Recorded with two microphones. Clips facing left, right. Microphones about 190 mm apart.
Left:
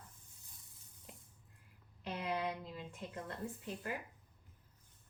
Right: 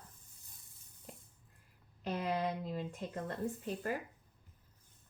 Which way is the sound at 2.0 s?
40° right (ahead or behind).